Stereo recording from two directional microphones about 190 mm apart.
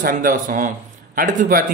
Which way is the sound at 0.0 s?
45° right (ahead or behind).